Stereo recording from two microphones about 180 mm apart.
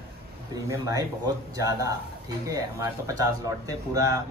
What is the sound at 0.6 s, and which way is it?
Speech, 20° right (ahead or behind).